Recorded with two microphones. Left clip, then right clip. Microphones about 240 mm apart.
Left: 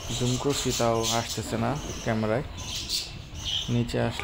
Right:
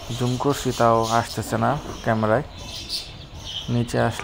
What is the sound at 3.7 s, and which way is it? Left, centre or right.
Speech, centre.